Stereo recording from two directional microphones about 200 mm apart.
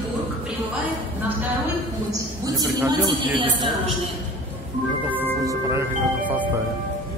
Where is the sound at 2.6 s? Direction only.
20° right (ahead or behind).